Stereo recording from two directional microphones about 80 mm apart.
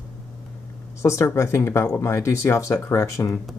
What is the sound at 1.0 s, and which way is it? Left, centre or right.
Speech, left.